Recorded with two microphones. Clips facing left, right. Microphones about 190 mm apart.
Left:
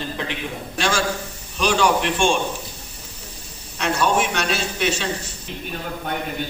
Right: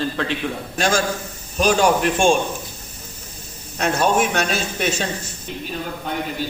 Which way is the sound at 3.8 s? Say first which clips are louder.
Right 2 dB; 45° right (ahead or behind).